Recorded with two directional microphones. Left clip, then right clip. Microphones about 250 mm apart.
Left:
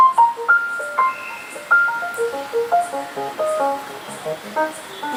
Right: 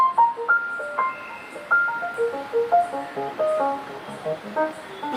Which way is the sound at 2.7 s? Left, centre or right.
Right.